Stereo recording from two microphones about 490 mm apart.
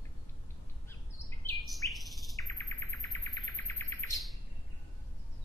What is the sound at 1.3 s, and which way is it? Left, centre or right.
Bird, centre.